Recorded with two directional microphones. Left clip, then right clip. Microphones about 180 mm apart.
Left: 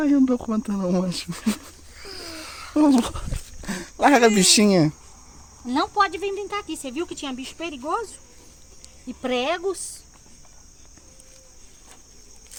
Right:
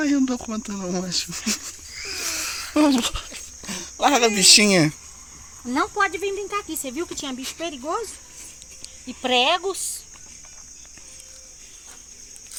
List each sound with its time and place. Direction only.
0.0 s speech: 30° left (ahead or behind); by 1.6 s 50° left (ahead or behind)
1.6 s a sound: 35° left (ahead or behind)
2.9 s speech: 45° left (ahead or behind)
3.7 s speech: 70° left (ahead or behind)
4.6 s speech: 25° left (ahead or behind)
5.7 s speech: 35° left (ahead or behind)
6.7 s speech: 20° left (ahead or behind)
9.0 s speech: 70° left (ahead or behind)